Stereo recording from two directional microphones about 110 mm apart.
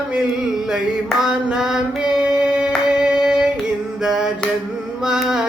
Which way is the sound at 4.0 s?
5° right (ahead or behind).